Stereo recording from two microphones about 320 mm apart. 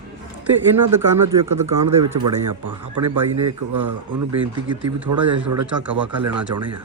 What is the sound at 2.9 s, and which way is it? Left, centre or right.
A man's voice, right.